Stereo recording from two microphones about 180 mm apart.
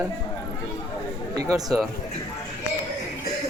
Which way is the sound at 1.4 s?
20° right (ahead or behind).